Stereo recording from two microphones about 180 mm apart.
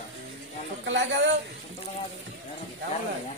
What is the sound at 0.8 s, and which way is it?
Speech, 90° right.